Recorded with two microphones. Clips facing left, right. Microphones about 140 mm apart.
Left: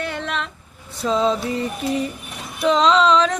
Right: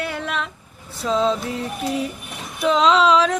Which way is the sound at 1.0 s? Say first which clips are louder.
Left 1 dB; centre (ahead or behind).